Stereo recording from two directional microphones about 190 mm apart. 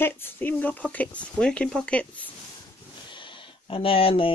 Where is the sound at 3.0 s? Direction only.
25° left (ahead or behind).